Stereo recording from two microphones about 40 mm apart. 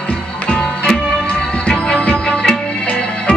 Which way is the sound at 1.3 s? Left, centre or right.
Left.